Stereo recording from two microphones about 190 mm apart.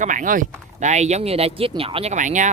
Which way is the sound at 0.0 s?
45° right (ahead or behind).